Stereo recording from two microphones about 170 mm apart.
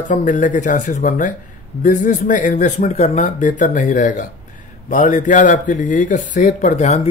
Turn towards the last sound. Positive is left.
turn(degrees=40)  # may be behind; listen again after turning